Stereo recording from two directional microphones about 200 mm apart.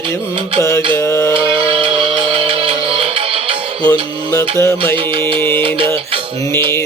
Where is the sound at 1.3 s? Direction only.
25° right (ahead or behind).